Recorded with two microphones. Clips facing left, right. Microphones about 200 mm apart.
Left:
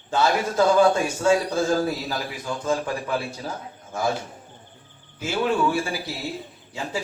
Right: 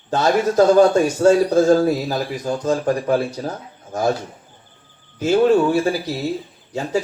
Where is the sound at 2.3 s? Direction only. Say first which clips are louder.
Right 4 dB; 40° right (ahead or behind).